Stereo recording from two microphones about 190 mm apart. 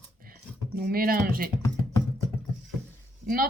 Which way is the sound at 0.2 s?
50° right (ahead or behind).